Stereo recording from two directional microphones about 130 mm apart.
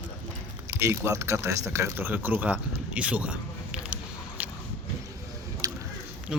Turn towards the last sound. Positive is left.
turn(degrees=-5)  # may be behind; listen again after turning